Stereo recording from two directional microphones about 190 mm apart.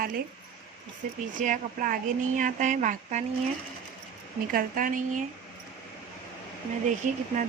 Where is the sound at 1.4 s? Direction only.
45° right (ahead or behind).